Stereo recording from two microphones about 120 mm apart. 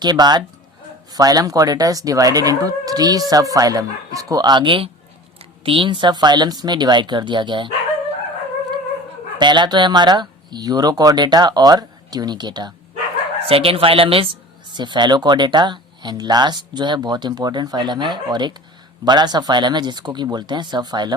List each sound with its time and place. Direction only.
0.0 s speech: 35° right (ahead or behind)
9.4 s speech: 40° right (ahead or behind)
13.4 s speech: 50° right (ahead or behind)
14.7 s speech: 40° right (ahead or behind)